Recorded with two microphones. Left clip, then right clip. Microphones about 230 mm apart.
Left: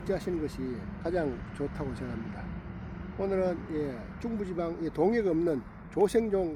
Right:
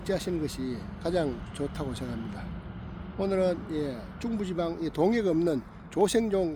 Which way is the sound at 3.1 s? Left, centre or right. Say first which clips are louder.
Right 3 dB; right.